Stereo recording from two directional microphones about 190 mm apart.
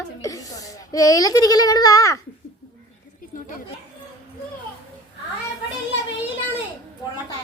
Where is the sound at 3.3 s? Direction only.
45° left (ahead or behind).